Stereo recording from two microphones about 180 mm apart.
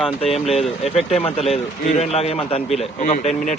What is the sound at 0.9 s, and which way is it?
Speech, 35° left (ahead or behind).